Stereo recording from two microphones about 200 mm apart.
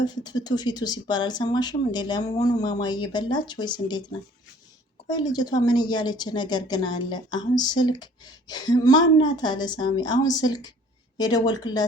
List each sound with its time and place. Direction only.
0.0 s speech: 20° left (ahead or behind)
5.1 s speech: 20° left (ahead or behind)